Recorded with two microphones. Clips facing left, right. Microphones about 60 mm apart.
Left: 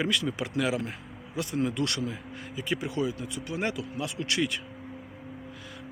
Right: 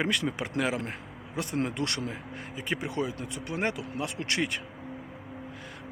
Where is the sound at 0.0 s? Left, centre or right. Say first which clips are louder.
Even; right.